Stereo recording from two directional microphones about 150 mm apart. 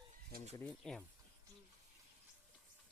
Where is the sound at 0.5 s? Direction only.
10° left (ahead or behind).